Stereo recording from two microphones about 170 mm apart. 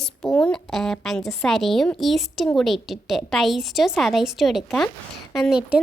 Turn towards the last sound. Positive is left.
turn(degrees=-5)  # may be behind; listen again after turning